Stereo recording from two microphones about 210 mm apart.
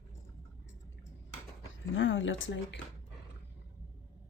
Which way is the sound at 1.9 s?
65° left (ahead or behind).